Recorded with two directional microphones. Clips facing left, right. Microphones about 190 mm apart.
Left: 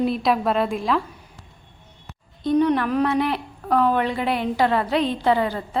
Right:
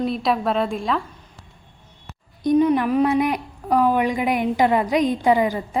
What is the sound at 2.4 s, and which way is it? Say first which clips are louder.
A woman's voice: right 2 dB; 10° right (ahead or behind).